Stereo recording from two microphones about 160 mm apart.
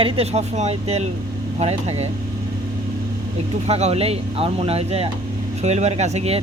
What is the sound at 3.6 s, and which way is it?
Speech, 40° right (ahead or behind).